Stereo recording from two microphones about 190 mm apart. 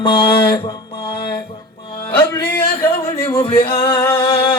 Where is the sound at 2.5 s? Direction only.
10° left (ahead or behind).